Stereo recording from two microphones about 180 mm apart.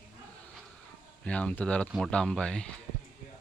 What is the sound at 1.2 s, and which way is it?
Speech, 5° left (ahead or behind).